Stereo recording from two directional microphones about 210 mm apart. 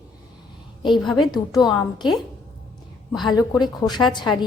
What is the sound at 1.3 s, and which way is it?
Speech, 20° left (ahead or behind).